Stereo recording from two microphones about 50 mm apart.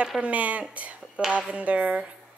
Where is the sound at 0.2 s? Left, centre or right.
Right.